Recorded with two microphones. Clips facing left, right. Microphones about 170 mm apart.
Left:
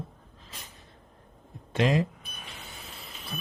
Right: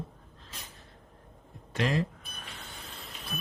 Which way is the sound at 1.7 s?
20° left (ahead or behind).